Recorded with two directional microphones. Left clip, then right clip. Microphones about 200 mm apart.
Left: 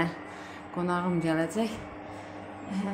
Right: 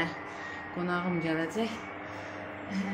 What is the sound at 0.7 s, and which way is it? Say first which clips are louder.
Speech: left 3 dB; 15° left (ahead or behind).